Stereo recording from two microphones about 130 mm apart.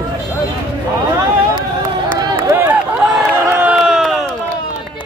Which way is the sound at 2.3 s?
15° right (ahead or behind).